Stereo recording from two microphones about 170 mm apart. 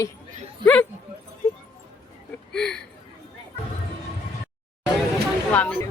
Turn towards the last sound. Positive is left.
turn(degrees=10)  # may be behind; listen again after turning